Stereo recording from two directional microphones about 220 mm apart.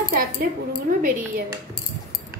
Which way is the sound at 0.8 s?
35° right (ahead or behind).